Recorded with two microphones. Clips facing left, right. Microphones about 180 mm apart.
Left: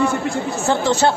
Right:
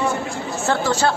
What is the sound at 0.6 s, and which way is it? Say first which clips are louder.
Speech: left 2 dB; 15° left (ahead or behind).